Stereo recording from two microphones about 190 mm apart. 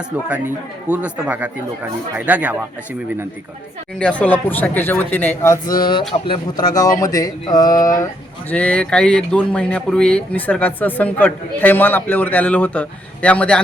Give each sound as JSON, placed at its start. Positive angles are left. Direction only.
{"t": 0.3, "sound": "a man's voice", "side_deg": -5}
{"t": 3.9, "sound": "speech", "side_deg": 5}
{"t": 5.8, "sound": "speech", "side_deg": 25}
{"t": 8.4, "sound": "speech", "side_deg": 5}